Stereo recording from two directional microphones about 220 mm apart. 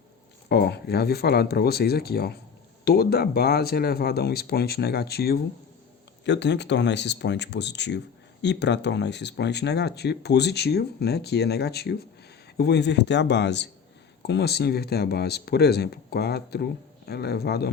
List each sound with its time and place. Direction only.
0.4 s speech: 50° left (ahead or behind)